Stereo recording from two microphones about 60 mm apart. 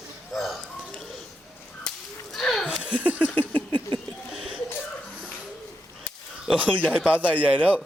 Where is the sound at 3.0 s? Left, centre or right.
Right.